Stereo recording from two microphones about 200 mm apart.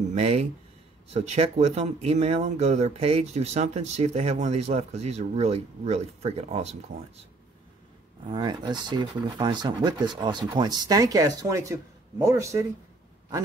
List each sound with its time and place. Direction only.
0.1 s speech: 35° right (ahead or behind); by 12.6 s 15° right (ahead or behind)